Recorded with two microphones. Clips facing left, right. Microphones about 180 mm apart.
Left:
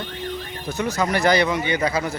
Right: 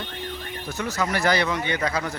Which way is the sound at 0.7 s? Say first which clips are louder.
Left 4 dB; 20° left (ahead or behind).